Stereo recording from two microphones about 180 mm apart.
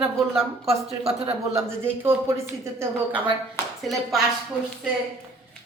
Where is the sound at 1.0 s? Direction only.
35° right (ahead or behind).